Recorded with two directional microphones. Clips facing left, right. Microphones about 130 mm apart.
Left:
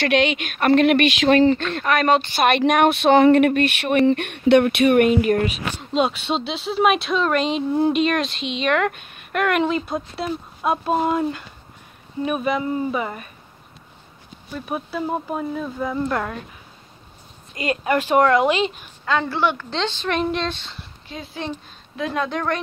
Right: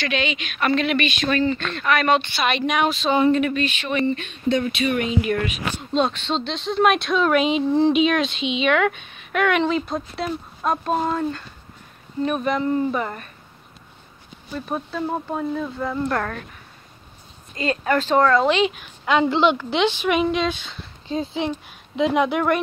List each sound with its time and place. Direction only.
0.0 s speech: 65° left (ahead or behind); by 1.6 s 80° left
1.6 s speech: 45° left (ahead or behind)
2.4 s speech: 55° left (ahead or behind)
5.9 s speech: 10° left (ahead or behind)
14.5 s speech: 10° left (ahead or behind)
17.6 s speech: 10° left (ahead or behind)
19.0 s speech: 15° right (ahead or behind)
21.4 s speech: 15° right (ahead or behind)